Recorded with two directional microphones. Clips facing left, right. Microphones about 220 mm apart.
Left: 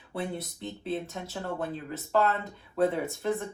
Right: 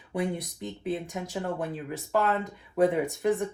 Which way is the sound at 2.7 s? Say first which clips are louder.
Right 3 dB; 15° right (ahead or behind).